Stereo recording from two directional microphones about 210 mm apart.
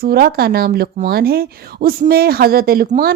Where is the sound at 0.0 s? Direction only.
45° right (ahead or behind).